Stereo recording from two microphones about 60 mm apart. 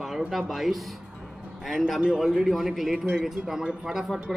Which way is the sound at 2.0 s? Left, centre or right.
Centre.